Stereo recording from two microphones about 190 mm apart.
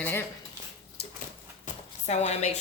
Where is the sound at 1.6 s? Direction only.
40° left (ahead or behind).